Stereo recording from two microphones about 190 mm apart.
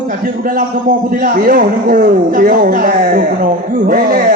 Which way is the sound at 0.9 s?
45° right (ahead or behind).